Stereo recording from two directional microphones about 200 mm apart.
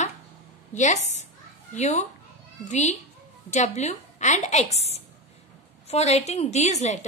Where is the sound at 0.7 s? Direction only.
35° left (ahead or behind).